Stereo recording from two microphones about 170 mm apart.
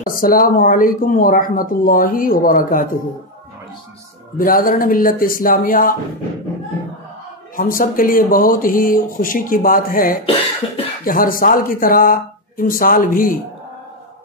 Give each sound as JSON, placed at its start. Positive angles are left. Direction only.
{"t": 0.0, "sound": "speech", "side_deg": 55}
{"t": 4.4, "sound": "speech", "side_deg": 55}
{"t": 7.5, "sound": "speech", "side_deg": 55}